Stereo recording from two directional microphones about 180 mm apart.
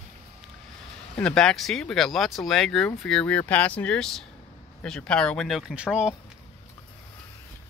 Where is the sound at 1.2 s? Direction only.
5° left (ahead or behind).